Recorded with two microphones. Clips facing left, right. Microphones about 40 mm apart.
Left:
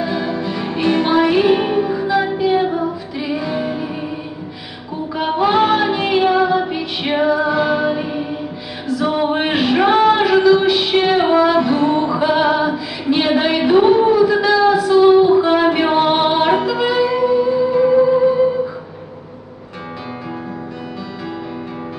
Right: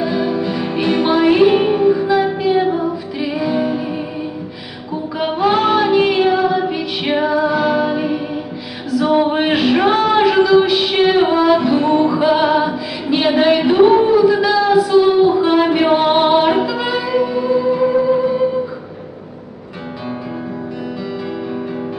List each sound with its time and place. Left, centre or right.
0.0 s music: centre
5.1 s female singing: centre
7.3 s music: centre